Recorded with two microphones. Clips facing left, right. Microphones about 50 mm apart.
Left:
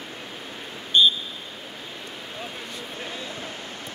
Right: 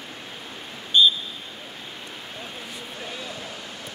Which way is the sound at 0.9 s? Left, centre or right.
Left.